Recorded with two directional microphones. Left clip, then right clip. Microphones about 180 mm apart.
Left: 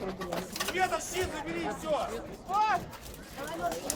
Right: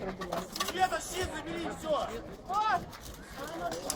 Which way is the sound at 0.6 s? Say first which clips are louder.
Even; centre (ahead or behind).